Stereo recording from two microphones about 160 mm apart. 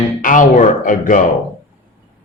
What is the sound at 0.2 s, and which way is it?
Speech, 55° left (ahead or behind).